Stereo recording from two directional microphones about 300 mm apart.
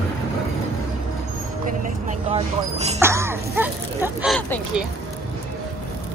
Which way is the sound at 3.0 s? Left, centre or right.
Centre.